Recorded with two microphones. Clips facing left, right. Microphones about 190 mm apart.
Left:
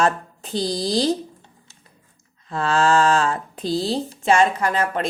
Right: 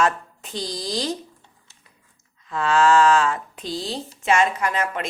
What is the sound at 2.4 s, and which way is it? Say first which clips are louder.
Speech: right 1 dB; 35° left (ahead or behind).